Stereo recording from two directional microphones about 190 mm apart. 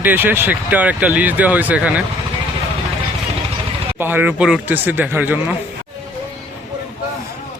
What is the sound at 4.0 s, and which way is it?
Speech, 10° right (ahead or behind).